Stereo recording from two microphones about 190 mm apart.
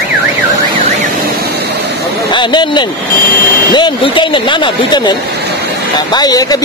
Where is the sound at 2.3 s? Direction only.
25° left (ahead or behind).